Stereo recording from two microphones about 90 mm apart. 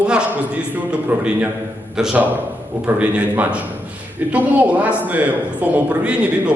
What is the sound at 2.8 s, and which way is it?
A man's voice, 15° right (ahead or behind).